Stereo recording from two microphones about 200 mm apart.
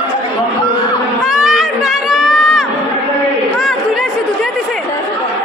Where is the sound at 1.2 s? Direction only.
Centre (ahead or behind).